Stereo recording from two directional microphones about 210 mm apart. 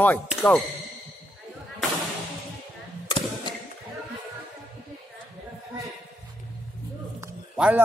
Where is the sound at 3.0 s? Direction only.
25° left (ahead or behind).